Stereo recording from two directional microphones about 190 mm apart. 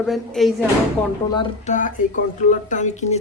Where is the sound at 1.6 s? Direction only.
40° left (ahead or behind).